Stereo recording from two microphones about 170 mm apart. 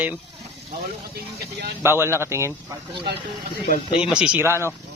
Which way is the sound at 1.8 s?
15° right (ahead or behind).